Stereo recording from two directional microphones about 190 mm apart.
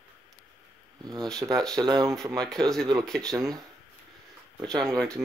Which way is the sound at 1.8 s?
20° right (ahead or behind).